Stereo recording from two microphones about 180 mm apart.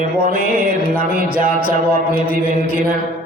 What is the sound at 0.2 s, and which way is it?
Music, 55° right (ahead or behind).